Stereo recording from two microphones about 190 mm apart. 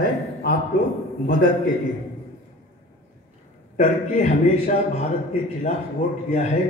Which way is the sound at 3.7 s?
40° left (ahead or behind).